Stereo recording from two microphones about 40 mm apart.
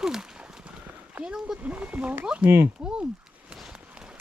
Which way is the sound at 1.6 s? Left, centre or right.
Right.